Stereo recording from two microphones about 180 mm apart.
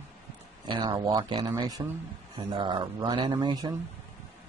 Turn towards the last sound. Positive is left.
turn(degrees=-25)  # may be behind; listen again after turning